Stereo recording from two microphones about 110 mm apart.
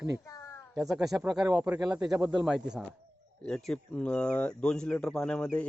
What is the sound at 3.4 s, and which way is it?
Speech, 5° left (ahead or behind).